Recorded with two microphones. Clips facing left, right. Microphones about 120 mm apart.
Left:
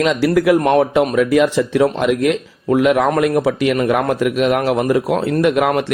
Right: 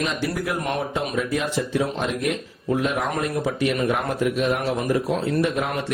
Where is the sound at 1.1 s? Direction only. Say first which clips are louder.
Left 10 dB; 90° left.